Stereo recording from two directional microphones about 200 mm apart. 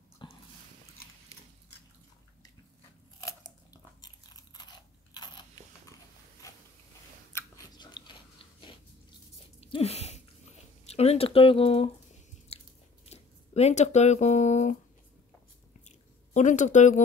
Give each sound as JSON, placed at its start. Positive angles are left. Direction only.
{"t": 0.2, "sound": "a sound", "side_deg": 25}
{"t": 3.2, "sound": "crunch", "side_deg": 20}
{"t": 5.1, "sound": "biting", "side_deg": 20}
{"t": 7.3, "sound": "chewing", "side_deg": 20}
{"t": 9.6, "sound": "a sound", "side_deg": 30}
{"t": 10.9, "sound": "speech", "side_deg": 30}
{"t": 12.5, "sound": "biting", "side_deg": 30}
{"t": 13.1, "sound": "speech", "side_deg": 30}
{"t": 16.3, "sound": "speech", "side_deg": 40}